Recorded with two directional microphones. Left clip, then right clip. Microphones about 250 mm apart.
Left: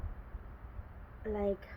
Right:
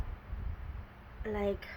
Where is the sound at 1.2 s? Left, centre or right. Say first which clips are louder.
Even; right.